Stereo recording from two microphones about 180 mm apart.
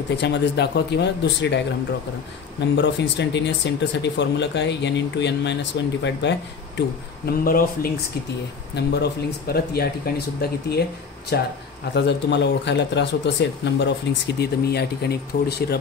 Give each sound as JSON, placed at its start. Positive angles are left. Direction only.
{"t": 0.2, "sound": "speech", "side_deg": 70}
{"t": 2.7, "sound": "speech", "side_deg": 75}
{"t": 7.2, "sound": "speech", "side_deg": 55}
{"t": 8.7, "sound": "speech", "side_deg": 65}
{"t": 11.9, "sound": "speech", "side_deg": 75}